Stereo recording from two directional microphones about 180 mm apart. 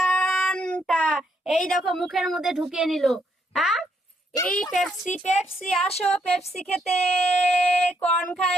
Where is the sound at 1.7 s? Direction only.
Centre (ahead or behind).